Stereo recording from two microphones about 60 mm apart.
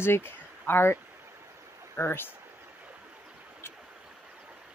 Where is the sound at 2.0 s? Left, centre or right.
Left.